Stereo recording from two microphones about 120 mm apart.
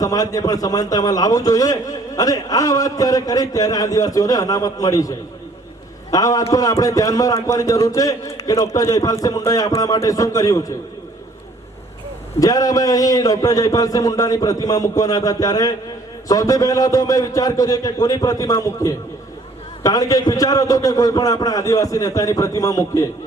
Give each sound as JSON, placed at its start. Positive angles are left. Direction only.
{"t": 0.0, "sound": "a man's voice", "side_deg": 30}
{"t": 12.4, "sound": "a man's voice", "side_deg": 30}